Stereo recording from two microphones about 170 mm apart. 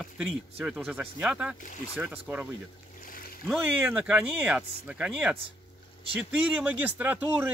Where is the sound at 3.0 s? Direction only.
55° left (ahead or behind).